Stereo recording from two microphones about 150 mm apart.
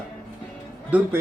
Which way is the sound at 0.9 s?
10° right (ahead or behind).